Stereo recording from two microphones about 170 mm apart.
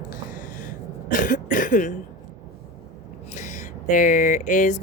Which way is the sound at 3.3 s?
45° left (ahead or behind).